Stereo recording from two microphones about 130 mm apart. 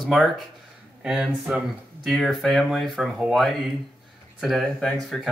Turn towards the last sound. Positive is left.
turn(degrees=0)  # may be behind; listen again after turning